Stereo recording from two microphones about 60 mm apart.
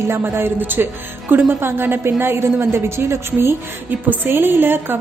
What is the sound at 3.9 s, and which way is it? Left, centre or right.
A woman's voice, right.